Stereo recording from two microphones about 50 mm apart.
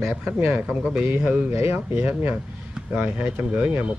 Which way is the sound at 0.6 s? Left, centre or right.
Centre.